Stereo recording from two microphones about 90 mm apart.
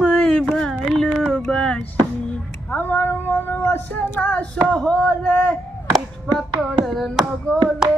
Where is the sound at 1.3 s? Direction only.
5° left (ahead or behind).